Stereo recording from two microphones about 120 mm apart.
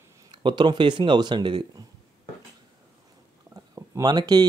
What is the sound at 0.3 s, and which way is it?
Speech, 40° right (ahead or behind).